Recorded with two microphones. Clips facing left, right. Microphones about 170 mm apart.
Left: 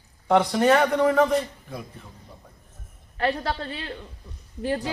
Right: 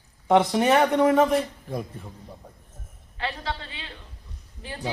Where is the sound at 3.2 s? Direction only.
45° left (ahead or behind).